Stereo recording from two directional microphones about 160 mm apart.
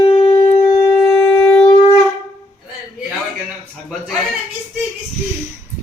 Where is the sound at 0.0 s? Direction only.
30° left (ahead or behind).